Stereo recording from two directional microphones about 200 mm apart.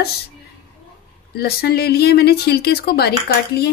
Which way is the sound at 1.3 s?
50° left (ahead or behind).